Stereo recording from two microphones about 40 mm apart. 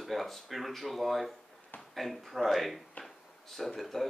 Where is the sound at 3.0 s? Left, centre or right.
Centre.